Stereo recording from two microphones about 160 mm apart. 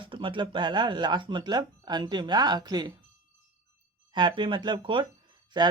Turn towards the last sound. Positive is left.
turn(degrees=-30)  # may be behind; listen again after turning